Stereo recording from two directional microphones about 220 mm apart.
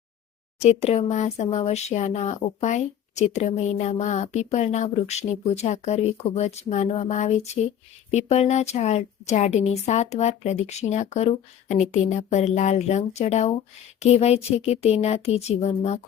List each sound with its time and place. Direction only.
0.6 s speech: 30° left (ahead or behind)